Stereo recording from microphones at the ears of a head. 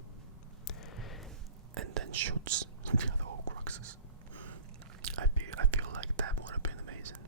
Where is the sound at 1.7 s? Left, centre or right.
Right.